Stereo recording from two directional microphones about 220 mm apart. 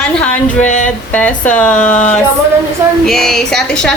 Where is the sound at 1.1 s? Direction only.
5° left (ahead or behind).